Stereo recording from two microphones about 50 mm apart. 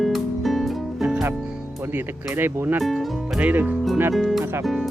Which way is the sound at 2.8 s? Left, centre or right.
Centre.